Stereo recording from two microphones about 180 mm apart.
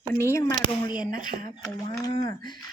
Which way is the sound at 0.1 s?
15° left (ahead or behind).